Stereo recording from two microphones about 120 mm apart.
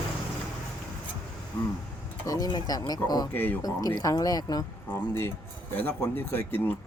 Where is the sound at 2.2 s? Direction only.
30° left (ahead or behind).